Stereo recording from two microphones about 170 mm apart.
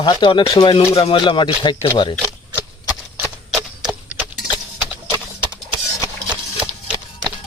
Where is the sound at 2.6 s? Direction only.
10° right (ahead or behind).